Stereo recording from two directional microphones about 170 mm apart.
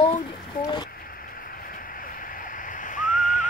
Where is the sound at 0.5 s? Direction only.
55° left (ahead or behind).